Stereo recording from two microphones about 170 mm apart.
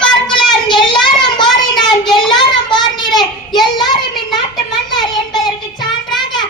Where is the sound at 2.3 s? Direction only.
25° left (ahead or behind).